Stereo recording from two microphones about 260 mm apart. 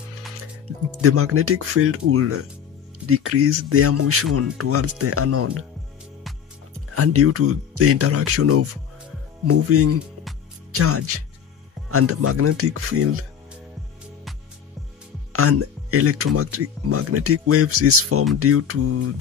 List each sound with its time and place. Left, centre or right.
1.0 s speech: right
7.0 s speech: right
15.3 s speech: right